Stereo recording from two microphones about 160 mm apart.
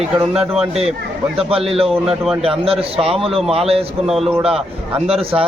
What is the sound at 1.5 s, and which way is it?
Speech, 35° right (ahead or behind).